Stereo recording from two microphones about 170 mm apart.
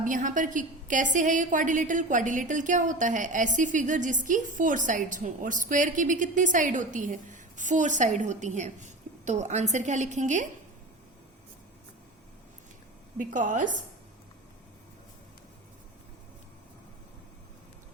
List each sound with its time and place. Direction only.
0.0 s a woman's voice: 50° right (ahead or behind)
13.1 s a woman's voice: 50° right (ahead or behind)